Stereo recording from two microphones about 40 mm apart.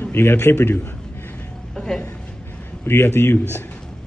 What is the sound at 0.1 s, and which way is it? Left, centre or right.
Speech, left.